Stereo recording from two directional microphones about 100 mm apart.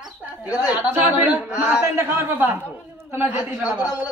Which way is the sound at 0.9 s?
15° right (ahead or behind).